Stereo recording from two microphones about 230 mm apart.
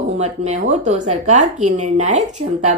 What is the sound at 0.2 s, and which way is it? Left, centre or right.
A woman's voice, right.